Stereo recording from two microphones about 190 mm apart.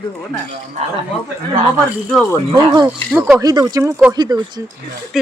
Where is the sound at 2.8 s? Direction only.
10° right (ahead or behind).